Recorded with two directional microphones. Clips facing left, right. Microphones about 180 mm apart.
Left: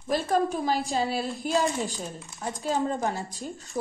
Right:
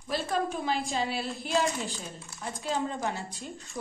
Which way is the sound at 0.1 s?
40° left (ahead or behind).